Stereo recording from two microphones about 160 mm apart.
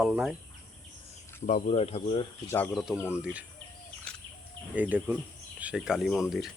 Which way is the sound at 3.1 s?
10° right (ahead or behind).